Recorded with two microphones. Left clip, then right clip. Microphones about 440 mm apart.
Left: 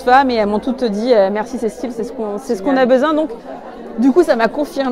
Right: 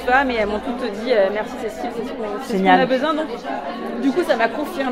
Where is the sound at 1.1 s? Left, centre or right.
Left.